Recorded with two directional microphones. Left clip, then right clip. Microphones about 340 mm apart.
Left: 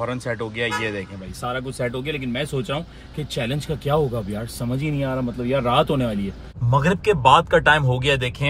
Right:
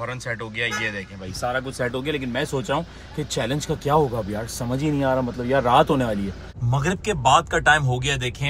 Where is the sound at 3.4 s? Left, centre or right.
Centre.